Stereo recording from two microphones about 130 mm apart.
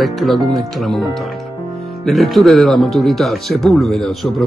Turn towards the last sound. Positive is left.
turn(degrees=0)  # may be behind; listen again after turning